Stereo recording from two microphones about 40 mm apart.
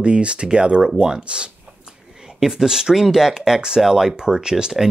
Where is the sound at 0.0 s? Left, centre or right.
Right.